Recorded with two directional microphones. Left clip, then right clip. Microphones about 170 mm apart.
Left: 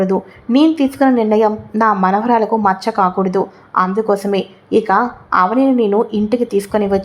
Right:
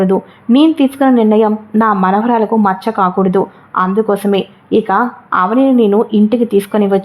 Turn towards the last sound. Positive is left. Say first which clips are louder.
# right 3 dB
turn(degrees=-15)  # may be behind; listen again after turning